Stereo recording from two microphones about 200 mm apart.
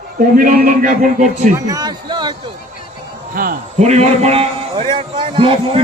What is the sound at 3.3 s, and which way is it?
A man's voice, 45° right (ahead or behind).